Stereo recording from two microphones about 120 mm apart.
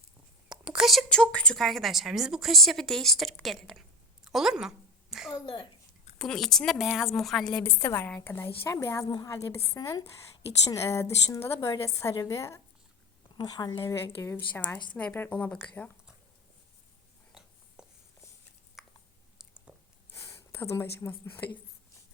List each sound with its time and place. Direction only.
0.4 s a woman's voice: 5° right (ahead or behind)
5.3 s a child's voice: 45° left (ahead or behind)
6.1 s a woman's voice: 5° left (ahead or behind)
7.6 s a woman's voice: 20° left (ahead or behind)
13.3 s a woman's voice: 35° left (ahead or behind)
13.8 s a woman's voice: 25° left (ahead or behind)
17.8 s a sound: 5° right (ahead or behind)
18.8 s chewing: centre (ahead or behind)
19.7 s a sound: 10° right (ahead or behind)
20.1 s speech: 25° left (ahead or behind)